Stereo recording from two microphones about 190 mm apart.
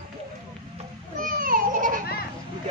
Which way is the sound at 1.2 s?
50° right (ahead or behind).